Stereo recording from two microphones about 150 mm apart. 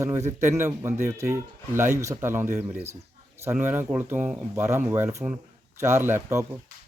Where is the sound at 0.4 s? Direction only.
20° right (ahead or behind).